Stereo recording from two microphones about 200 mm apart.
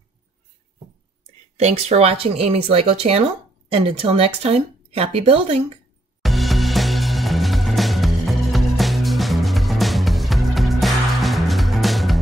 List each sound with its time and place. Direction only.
1.6 s a woman's voice: 35° right (ahead or behind)
6.2 s music: centre (ahead or behind)